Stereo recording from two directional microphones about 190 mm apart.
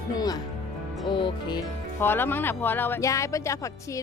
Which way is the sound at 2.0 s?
10° left (ahead or behind).